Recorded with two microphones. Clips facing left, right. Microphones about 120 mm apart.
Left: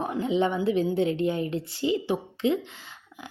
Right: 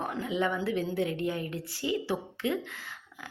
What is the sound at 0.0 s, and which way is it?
Speech, 20° left (ahead or behind).